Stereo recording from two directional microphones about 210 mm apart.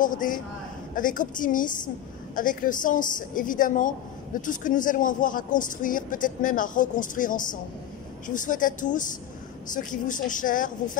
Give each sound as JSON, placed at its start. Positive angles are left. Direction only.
{"t": 0.0, "sound": "a woman's voice", "side_deg": 40}